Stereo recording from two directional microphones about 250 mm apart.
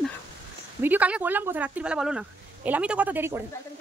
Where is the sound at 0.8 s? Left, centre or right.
Centre.